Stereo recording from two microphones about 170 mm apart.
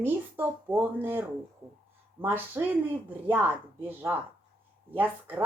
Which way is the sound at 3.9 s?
10° right (ahead or behind).